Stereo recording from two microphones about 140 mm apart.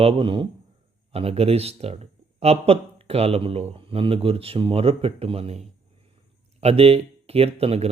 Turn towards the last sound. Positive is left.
turn(degrees=-45)  # may be behind; listen again after turning